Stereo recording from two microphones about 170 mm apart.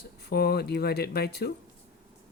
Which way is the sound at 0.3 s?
70° left (ahead or behind).